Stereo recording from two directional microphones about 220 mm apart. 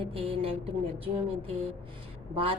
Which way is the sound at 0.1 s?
25° right (ahead or behind).